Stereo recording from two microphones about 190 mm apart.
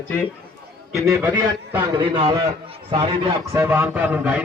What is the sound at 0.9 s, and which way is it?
A man's voice, 15° right (ahead or behind).